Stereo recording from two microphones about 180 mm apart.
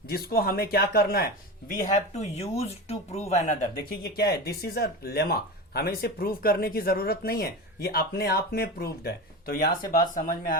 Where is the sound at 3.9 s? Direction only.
60° left (ahead or behind).